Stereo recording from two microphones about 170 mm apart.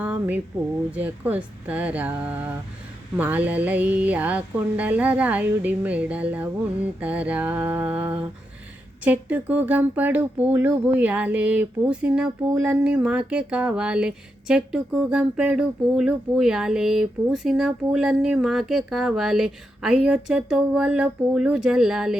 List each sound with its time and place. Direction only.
0.0 s speech: 10° right (ahead or behind)